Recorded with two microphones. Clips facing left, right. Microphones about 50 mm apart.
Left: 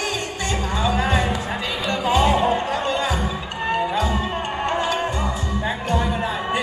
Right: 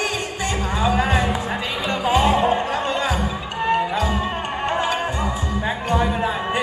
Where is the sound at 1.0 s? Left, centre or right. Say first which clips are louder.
Right 1 dB; centre.